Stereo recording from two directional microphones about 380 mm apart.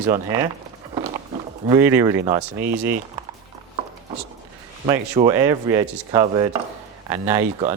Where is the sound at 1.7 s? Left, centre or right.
Centre.